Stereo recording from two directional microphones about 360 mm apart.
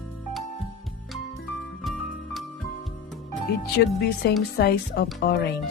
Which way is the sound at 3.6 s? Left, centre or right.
Left.